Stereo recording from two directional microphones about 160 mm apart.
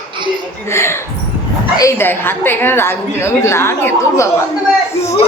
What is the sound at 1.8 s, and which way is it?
A woman's voice, 15° left (ahead or behind).